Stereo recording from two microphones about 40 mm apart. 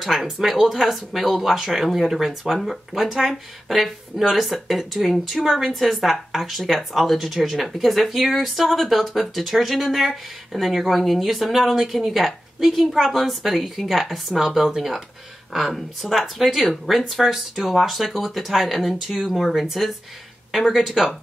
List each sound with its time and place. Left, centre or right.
0.0 s speech: centre